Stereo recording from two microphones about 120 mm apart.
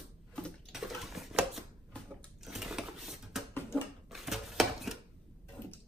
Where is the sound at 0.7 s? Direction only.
Centre (ahead or behind).